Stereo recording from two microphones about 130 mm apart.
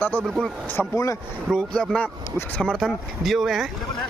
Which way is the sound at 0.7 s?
20° left (ahead or behind).